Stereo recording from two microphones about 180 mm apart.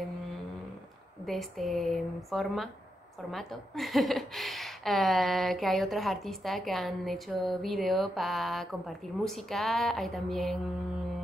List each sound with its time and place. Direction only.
1.2 s a woman's voice: centre (ahead or behind)